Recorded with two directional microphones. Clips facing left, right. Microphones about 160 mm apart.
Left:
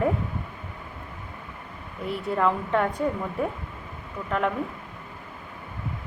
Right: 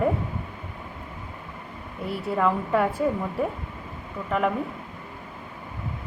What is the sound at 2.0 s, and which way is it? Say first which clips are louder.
Speech: even; centre (ahead or behind).